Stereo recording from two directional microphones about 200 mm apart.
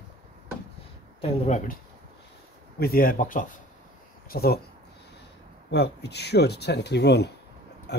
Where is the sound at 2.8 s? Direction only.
45° left (ahead or behind).